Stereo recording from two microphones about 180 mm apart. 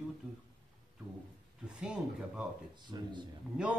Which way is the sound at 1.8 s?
5° right (ahead or behind).